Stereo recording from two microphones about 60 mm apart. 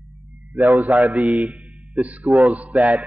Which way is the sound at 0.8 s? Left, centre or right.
Right.